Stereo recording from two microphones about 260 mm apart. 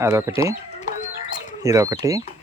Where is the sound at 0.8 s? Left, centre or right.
Left.